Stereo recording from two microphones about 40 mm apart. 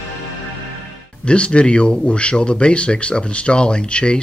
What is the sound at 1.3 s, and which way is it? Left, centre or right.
Speech, left.